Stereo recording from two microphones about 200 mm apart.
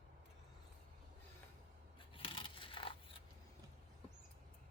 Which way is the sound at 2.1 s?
25° left (ahead or behind).